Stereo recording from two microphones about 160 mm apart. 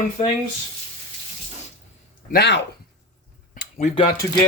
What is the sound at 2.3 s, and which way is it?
Speech, 90° left.